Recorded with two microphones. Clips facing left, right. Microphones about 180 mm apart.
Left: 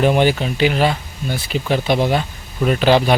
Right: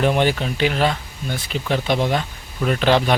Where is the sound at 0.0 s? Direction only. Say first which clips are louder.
Left 3 dB; 5° left (ahead or behind).